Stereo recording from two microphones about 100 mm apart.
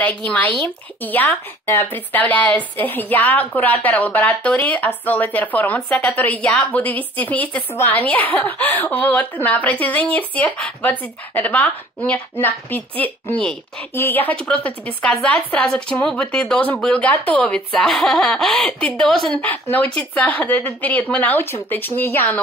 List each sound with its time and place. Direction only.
0.0 s a woman's voice: 15° left (ahead or behind)
1.7 s a woman's voice: 30° left (ahead or behind)
2.0 s a woman's voice: 15° left (ahead or behind)
19.3 s a woman's voice: 15° left (ahead or behind)